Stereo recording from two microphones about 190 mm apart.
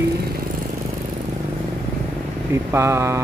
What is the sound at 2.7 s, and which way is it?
Speech, 15° right (ahead or behind).